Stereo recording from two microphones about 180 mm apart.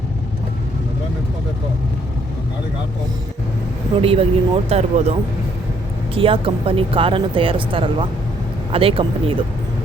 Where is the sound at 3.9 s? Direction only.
30° right (ahead or behind).